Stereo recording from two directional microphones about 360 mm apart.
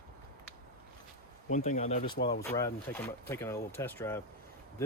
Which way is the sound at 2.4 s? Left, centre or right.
Centre.